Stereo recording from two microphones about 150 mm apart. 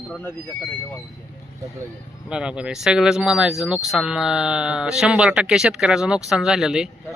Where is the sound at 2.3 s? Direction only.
5° right (ahead or behind).